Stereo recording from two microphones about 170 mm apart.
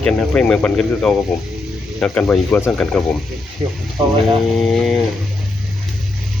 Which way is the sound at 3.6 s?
30° right (ahead or behind).